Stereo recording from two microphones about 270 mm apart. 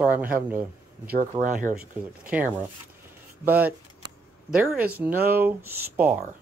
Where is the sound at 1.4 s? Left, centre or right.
Right.